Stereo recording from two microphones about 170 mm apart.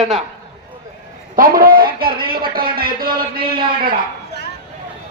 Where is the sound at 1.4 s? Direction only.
60° right (ahead or behind).